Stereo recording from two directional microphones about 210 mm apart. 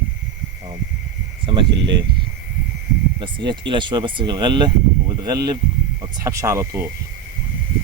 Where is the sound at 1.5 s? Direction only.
25° right (ahead or behind).